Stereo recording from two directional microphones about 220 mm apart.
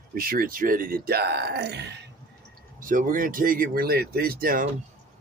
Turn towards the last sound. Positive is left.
turn(degrees=-40)  # may be behind; listen again after turning